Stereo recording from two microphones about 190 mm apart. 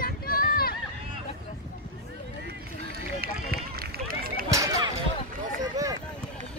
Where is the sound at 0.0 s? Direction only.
50° left (ahead or behind).